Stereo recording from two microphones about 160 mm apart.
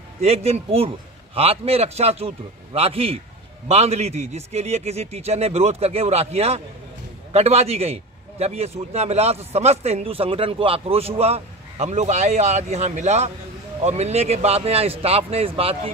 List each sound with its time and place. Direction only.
0.2 s a man's voice: 40° right (ahead or behind)